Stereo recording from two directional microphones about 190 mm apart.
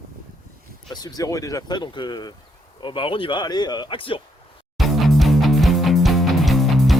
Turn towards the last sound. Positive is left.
turn(degrees=0)  # may be behind; listen again after turning